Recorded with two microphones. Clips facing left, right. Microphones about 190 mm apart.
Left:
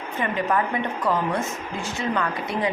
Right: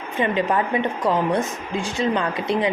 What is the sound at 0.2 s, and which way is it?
A woman's voice, 20° right (ahead or behind).